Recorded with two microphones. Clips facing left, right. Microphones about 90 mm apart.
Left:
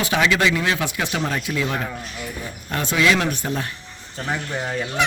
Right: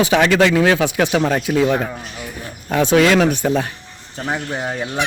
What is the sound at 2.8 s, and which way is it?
Speech, 90° right.